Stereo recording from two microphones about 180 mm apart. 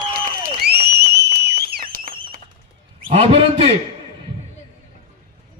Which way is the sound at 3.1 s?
30° right (ahead or behind).